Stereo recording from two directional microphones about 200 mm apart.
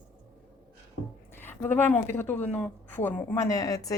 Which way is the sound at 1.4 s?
10° left (ahead or behind).